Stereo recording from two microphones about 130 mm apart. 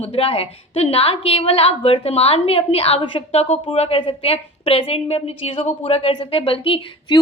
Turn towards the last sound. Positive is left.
turn(degrees=45)  # may be behind; listen again after turning